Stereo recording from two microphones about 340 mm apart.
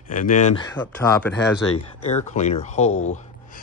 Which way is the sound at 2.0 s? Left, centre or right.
Centre.